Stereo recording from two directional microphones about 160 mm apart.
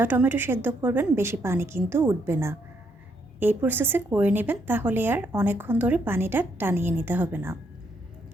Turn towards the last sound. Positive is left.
turn(degrees=-15)  # may be behind; listen again after turning